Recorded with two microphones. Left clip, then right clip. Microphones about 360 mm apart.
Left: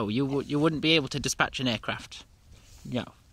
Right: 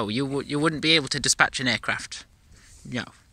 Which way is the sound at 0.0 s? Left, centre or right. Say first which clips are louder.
Right 2 dB; centre.